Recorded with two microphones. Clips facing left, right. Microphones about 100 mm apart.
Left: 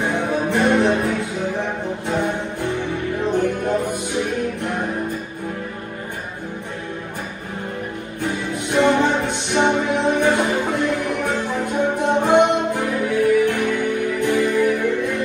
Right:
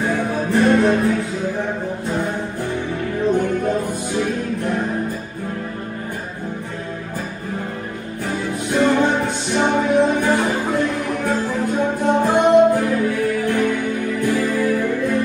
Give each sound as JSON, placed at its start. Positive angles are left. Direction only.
{"t": 0.0, "sound": "music", "side_deg": 20}
{"t": 8.2, "sound": "music", "side_deg": 20}